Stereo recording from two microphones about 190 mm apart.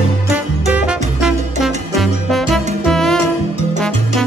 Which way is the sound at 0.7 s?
5° right (ahead or behind).